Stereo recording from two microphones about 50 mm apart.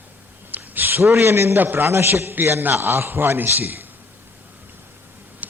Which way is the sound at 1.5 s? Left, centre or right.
Right.